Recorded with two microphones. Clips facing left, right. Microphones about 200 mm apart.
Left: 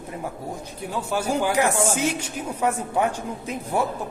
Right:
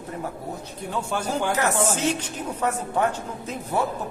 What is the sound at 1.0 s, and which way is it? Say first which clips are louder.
A woman's voice: left 3 dB; 10° left (ahead or behind).